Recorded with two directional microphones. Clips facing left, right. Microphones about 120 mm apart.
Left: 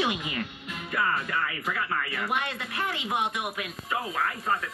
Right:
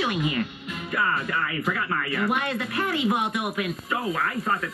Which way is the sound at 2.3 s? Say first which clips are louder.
Right 4 dB; 20° left (ahead or behind).